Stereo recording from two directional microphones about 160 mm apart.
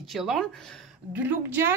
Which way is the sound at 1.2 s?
15° right (ahead or behind).